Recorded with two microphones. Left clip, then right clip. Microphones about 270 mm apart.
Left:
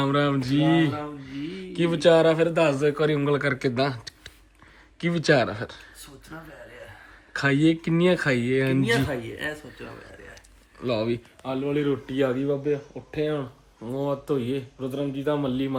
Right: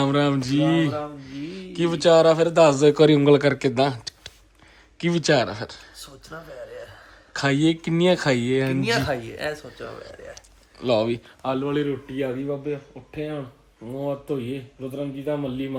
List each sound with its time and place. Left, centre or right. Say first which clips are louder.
0.0 s speech: right 2 dB; centre
7.3 s speech: even; centre
10.3 s a sound: right 2 dB; centre
11.4 s speech: right 3 dB; centre
12.1 s a man's voice: left 3 dB; centre